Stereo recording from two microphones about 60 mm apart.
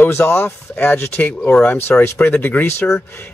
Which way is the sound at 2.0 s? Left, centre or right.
Left.